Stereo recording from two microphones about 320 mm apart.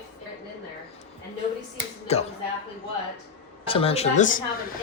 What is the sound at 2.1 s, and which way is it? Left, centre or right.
Speech, centre.